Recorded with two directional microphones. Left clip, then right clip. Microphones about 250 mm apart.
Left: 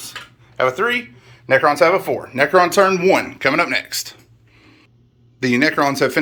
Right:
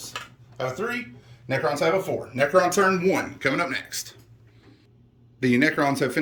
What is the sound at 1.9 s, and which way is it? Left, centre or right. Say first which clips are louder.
Speech: left 6 dB; left.